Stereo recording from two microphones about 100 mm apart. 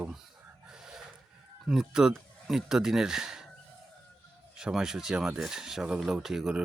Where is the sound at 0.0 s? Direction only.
5° right (ahead or behind).